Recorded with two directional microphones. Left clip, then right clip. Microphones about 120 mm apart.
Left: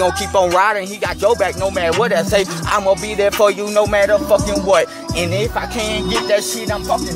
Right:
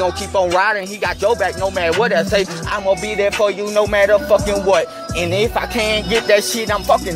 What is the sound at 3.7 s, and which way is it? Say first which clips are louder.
Music: even; 10° left (ahead or behind).